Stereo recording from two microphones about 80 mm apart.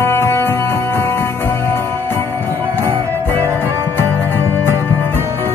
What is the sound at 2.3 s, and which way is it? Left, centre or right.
Music, right.